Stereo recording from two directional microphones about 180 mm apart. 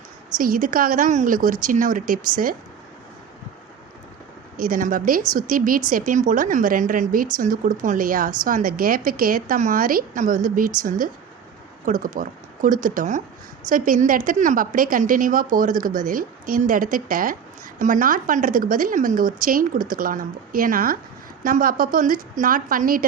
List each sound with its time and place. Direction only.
0.3 s a woman's voice: 50° right (ahead or behind)
4.5 s a woman's voice: 50° right (ahead or behind)